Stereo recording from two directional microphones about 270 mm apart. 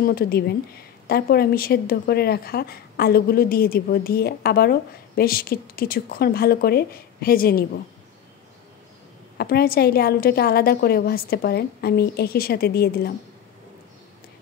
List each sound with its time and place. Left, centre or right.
0.0 s a woman's voice: left
9.4 s a woman's voice: left